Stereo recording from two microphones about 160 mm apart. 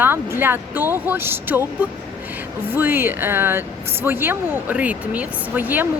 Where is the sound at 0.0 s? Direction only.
15° right (ahead or behind).